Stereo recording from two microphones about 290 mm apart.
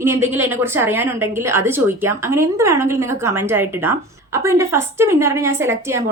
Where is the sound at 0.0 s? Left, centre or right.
Centre.